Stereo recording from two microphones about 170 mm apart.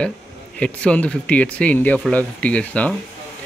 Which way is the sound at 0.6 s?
5° left (ahead or behind).